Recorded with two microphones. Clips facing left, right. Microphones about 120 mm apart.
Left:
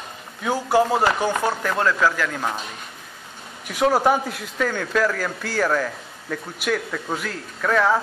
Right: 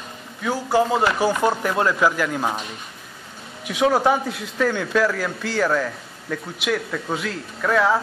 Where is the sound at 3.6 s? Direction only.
Centre (ahead or behind).